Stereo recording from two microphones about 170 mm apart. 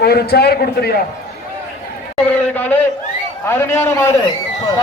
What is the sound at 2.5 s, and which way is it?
A man's voice, 10° left (ahead or behind).